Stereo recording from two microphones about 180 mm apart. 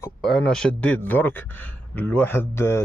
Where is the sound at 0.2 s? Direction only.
Centre (ahead or behind).